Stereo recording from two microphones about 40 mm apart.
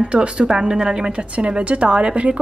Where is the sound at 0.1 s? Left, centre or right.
Right.